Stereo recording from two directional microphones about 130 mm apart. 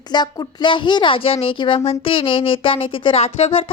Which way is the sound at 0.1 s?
35° left (ahead or behind).